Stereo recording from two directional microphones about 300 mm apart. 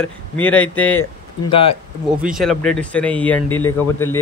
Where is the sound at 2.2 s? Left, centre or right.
Centre.